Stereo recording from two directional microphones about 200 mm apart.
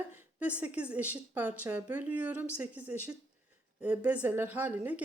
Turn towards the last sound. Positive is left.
turn(degrees=-10)  # may be behind; listen again after turning